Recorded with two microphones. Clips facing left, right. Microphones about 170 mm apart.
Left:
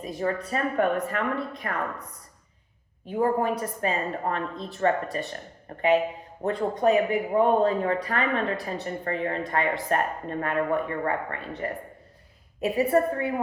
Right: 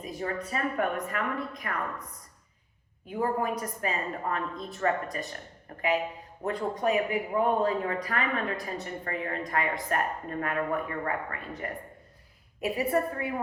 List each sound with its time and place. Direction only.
0.0 s speech: 35° left (ahead or behind)
3.1 s a woman's voice: 30° left (ahead or behind)